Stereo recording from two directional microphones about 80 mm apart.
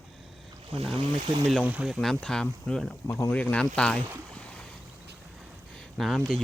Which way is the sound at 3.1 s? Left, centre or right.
Left.